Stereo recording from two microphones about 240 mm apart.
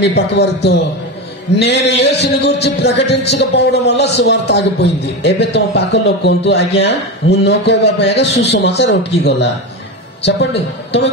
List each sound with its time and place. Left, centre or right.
0.0 s a man's voice: left